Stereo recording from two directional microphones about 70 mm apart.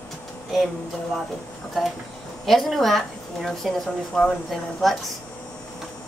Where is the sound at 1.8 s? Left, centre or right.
Centre.